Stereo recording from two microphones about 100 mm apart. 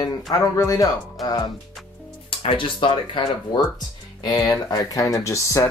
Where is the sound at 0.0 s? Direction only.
35° left (ahead or behind).